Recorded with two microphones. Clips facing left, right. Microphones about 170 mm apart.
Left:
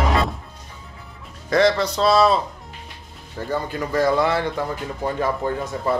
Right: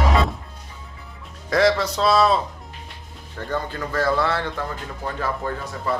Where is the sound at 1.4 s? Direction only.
Centre (ahead or behind).